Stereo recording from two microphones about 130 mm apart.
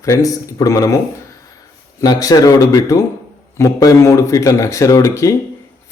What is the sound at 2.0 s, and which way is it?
Speech, 30° left (ahead or behind).